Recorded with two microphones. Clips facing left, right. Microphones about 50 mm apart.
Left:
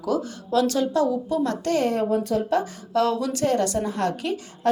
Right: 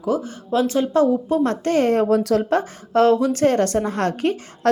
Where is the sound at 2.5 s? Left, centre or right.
Right.